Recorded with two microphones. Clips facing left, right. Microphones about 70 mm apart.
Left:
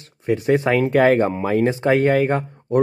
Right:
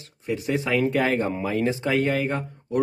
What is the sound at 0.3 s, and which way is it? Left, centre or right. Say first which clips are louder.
Speech: left 7 dB; left.